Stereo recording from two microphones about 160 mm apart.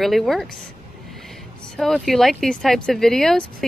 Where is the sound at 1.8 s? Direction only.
Centre (ahead or behind).